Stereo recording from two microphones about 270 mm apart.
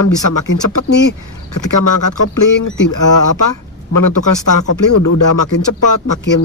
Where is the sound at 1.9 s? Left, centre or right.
Left.